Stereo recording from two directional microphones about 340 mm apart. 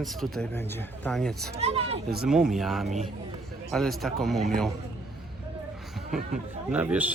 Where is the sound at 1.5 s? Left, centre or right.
Centre.